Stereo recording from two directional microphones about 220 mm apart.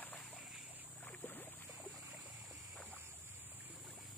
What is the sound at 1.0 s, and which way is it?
Boat, 10° left (ahead or behind).